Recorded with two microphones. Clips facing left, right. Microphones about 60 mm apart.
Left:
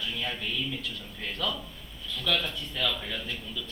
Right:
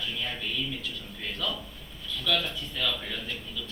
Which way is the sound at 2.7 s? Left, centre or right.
Left.